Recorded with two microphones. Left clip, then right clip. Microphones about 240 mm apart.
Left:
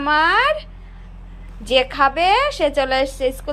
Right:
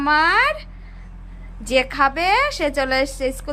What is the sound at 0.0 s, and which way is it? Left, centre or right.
A woman's voice, centre.